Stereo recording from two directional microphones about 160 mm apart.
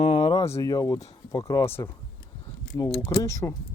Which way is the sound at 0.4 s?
20° left (ahead or behind).